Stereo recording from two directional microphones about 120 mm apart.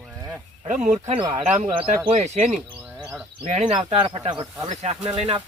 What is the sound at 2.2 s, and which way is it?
Speech, 75° right (ahead or behind).